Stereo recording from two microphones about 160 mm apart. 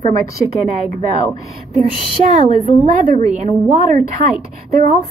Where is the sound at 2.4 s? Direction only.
50° right (ahead or behind).